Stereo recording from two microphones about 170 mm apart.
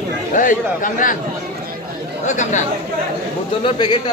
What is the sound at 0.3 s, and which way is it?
Speech, 50° left (ahead or behind).